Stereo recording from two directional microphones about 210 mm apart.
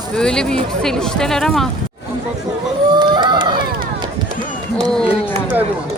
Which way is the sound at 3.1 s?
20° right (ahead or behind).